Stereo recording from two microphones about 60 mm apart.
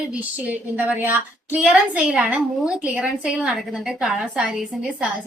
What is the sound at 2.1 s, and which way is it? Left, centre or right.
A woman's voice, centre.